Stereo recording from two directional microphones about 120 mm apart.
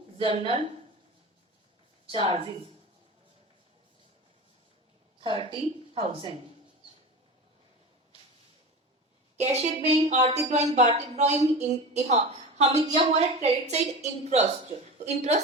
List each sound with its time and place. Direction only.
0.3 s a woman's voice: 65° right (ahead or behind)
2.1 s a woman's voice: 55° right (ahead or behind)
5.2 s a woman's voice: 45° right (ahead or behind)
9.4 s a woman's voice: 65° right (ahead or behind)